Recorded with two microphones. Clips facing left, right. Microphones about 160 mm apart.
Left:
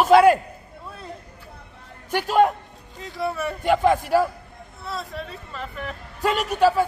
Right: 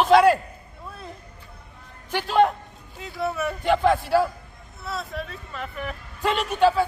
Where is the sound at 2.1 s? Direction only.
10° left (ahead or behind).